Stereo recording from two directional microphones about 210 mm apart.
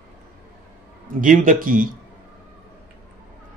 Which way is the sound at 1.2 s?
40° right (ahead or behind).